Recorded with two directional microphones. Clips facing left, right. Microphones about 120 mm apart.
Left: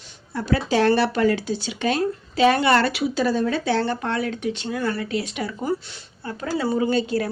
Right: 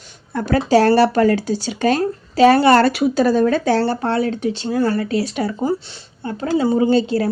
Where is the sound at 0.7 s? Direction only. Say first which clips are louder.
Right 7 dB; 40° right (ahead or behind).